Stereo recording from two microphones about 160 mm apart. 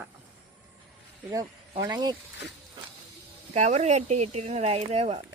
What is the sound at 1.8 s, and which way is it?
Speech, 25° right (ahead or behind).